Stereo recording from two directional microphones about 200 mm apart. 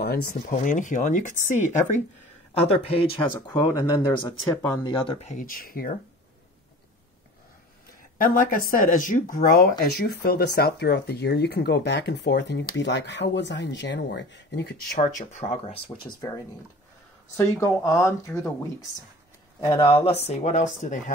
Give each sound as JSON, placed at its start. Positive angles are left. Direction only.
{"t": 0.0, "sound": "speech", "side_deg": 50}
{"t": 3.3, "sound": "speech", "side_deg": 15}
{"t": 5.3, "sound": "speech", "side_deg": 45}
{"t": 8.2, "sound": "speech", "side_deg": 45}
{"t": 15.0, "sound": "speech", "side_deg": 40}
{"t": 17.4, "sound": "speech", "side_deg": 15}